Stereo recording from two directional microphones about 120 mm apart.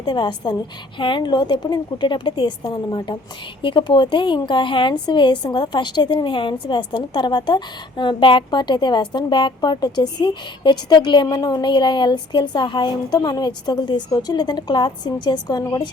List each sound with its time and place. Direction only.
0.0 s a woman's voice: 40° left (ahead or behind)